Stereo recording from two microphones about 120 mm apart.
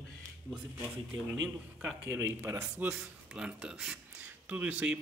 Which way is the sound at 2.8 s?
10° right (ahead or behind).